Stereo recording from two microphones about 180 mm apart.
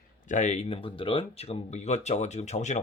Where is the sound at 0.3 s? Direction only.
40° left (ahead or behind).